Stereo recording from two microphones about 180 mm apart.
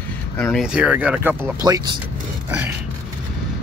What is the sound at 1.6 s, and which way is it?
Speech, 20° right (ahead or behind).